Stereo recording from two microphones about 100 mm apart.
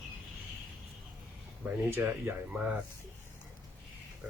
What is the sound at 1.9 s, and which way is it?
Speech, 20° right (ahead or behind).